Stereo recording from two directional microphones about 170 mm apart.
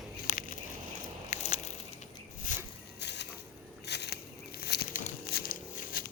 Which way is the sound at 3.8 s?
80° left.